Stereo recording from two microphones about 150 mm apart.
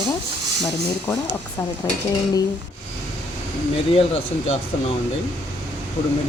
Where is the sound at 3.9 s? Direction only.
45° left (ahead or behind).